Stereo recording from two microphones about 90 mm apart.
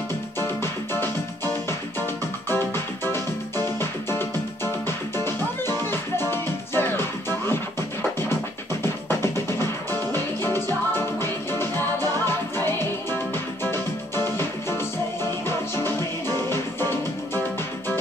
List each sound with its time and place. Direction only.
0.4 s music: 25° left (ahead or behind)